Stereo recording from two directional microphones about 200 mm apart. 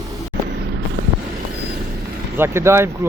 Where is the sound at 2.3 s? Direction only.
10° right (ahead or behind).